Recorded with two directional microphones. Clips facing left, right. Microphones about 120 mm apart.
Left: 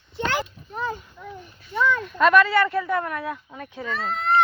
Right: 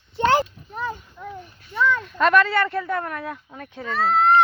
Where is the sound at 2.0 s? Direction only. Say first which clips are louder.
Left 2 dB; 5° left (ahead or behind).